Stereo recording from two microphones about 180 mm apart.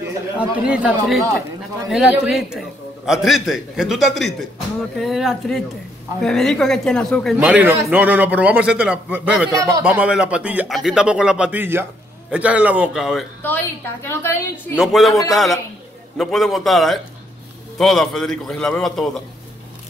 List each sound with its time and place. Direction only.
0.4 s a man's voice: 5° right (ahead or behind)
7.3 s a man's voice: 10° right (ahead or behind)
9.5 s speech: 20° right (ahead or behind)
9.9 s a man's voice: 5° right (ahead or behind)
14.0 s a woman's voice: 10° left (ahead or behind)
14.8 s speech: centre (ahead or behind)